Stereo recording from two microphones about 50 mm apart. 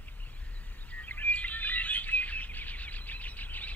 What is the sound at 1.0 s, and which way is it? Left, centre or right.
Bird, left.